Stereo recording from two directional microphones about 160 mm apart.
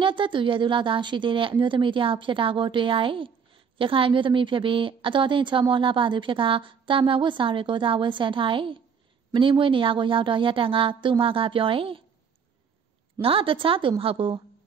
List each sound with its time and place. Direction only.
0.0 s a woman's voice: 30° right (ahead or behind)
13.2 s a woman's voice: 35° right (ahead or behind)